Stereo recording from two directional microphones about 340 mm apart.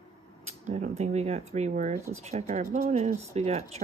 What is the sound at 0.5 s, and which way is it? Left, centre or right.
Speech, right.